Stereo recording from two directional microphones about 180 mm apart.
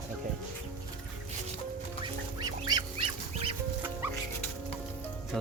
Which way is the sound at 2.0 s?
25° right (ahead or behind).